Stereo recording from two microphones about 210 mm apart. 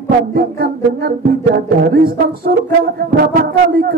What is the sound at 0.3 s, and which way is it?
Music, 45° right (ahead or behind).